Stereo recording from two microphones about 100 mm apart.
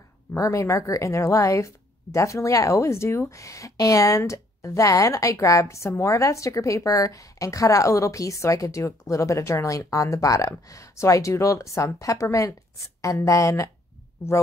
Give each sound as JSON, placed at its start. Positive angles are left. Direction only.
{"t": 0.4, "sound": "a woman's voice", "side_deg": 30}